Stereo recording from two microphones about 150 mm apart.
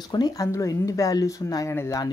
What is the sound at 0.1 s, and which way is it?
Speech, 25° left (ahead or behind).